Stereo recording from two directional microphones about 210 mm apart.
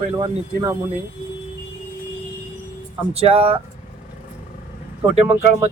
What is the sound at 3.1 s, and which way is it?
Speech, 30° right (ahead or behind).